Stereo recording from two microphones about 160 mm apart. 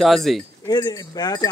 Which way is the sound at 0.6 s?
25° left (ahead or behind).